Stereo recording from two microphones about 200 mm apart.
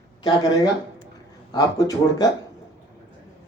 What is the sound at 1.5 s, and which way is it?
Speech, 20° left (ahead or behind).